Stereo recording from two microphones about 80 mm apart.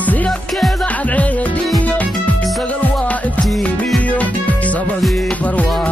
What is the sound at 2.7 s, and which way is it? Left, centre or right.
Music, centre.